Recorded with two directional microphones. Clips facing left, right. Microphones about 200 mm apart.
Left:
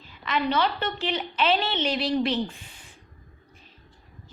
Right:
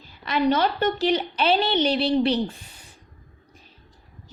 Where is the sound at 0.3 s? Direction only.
45° right (ahead or behind).